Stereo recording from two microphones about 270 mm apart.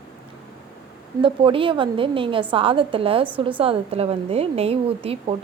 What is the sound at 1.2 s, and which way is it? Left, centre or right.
A woman's voice, centre.